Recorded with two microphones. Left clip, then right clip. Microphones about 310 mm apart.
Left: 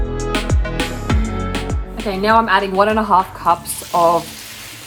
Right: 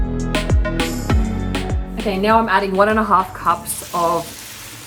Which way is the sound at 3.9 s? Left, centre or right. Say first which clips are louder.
Left 5 dB; centre.